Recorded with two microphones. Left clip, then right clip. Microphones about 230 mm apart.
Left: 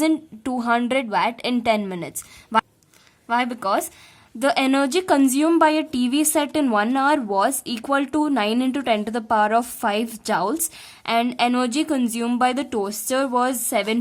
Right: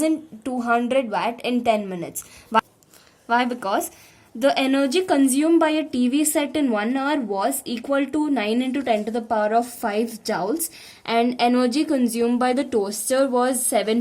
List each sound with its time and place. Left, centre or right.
0.6 s a woman's voice: left